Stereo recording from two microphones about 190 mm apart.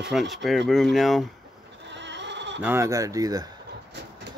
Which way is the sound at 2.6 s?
10° right (ahead or behind).